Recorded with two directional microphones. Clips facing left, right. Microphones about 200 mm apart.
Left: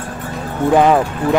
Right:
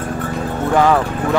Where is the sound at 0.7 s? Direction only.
15° left (ahead or behind).